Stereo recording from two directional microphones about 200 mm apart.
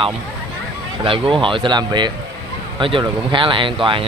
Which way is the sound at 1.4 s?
25° right (ahead or behind).